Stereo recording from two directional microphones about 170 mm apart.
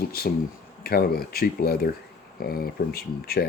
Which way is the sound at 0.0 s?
65° left (ahead or behind).